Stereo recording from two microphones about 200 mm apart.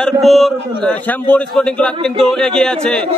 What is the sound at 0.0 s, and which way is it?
A man's voice, centre (ahead or behind).